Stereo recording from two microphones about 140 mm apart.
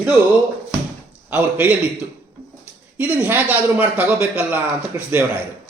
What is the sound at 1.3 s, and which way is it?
Speech, 10° right (ahead or behind).